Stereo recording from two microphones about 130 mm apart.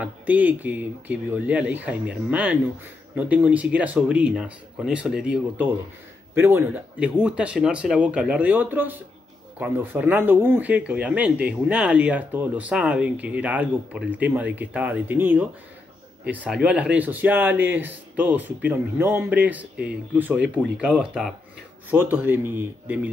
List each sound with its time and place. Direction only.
0.0 s speech: 10° right (ahead or behind)
6.3 s speech: 20° right (ahead or behind)
21.9 s speech: 15° right (ahead or behind)